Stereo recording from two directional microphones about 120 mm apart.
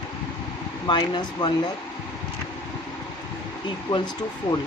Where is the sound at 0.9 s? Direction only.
40° left (ahead or behind).